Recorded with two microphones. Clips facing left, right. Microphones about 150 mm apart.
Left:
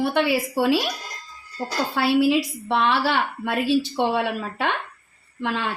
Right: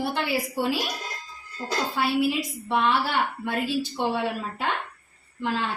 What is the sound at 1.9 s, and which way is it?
A woman's voice, 90° left.